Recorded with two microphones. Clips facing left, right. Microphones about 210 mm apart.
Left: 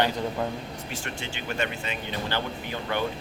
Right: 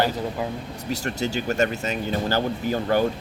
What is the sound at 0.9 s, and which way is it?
Speech, 40° right (ahead or behind).